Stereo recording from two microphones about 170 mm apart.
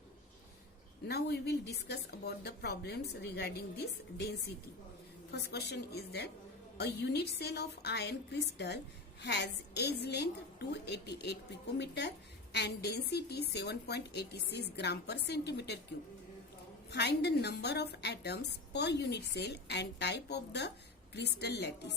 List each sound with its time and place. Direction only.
1.0 s a woman's voice: 75° left (ahead or behind)
5.3 s a woman's voice: 75° left (ahead or behind)
16.9 s a woman's voice: 75° left (ahead or behind)